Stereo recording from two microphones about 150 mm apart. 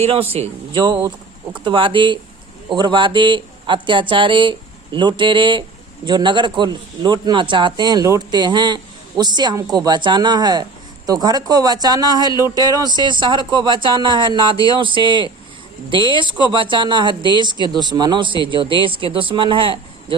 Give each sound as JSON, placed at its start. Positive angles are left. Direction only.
{"t": 0.0, "sound": "speech", "side_deg": -40}
{"t": 14.5, "sound": "a sound", "side_deg": 30}
{"t": 14.8, "sound": "speech", "side_deg": -35}